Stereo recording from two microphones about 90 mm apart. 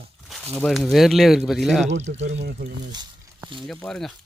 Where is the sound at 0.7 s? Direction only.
Centre (ahead or behind).